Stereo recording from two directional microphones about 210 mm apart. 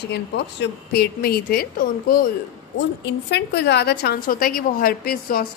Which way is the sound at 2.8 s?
55° left (ahead or behind).